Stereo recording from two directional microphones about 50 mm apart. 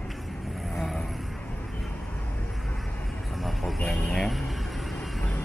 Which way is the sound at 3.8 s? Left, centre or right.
Centre.